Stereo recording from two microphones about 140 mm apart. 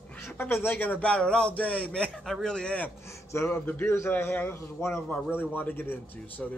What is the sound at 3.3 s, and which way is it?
A man's voice, 20° left (ahead or behind).